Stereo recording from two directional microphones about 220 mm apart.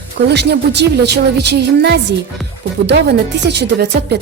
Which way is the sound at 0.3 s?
50° right (ahead or behind).